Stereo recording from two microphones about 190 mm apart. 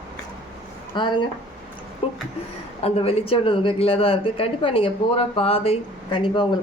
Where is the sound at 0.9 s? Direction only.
25° left (ahead or behind).